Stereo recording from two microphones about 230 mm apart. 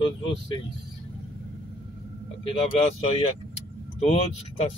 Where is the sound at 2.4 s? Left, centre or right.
Left.